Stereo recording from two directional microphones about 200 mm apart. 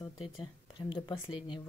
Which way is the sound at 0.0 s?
25° left (ahead or behind).